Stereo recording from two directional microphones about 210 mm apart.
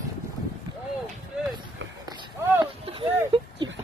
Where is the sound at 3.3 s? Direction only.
25° right (ahead or behind).